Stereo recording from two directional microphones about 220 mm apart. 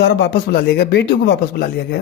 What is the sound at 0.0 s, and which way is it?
Speech, 50° left (ahead or behind).